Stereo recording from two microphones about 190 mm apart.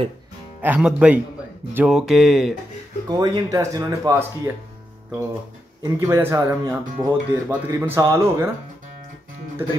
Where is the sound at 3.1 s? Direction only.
20° right (ahead or behind).